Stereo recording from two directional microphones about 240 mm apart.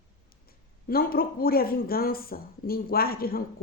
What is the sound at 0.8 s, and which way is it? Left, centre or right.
Speech, left.